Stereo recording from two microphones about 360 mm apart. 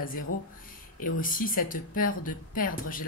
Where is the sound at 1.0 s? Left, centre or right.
Left.